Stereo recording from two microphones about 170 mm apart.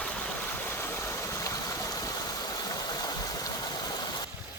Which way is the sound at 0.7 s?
15° left (ahead or behind).